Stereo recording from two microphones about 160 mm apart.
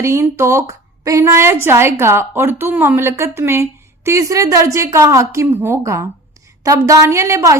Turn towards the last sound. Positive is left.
turn(degrees=-20)  # may be behind; listen again after turning